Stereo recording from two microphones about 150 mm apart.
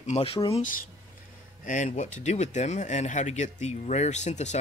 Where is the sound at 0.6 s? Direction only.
65° left (ahead or behind).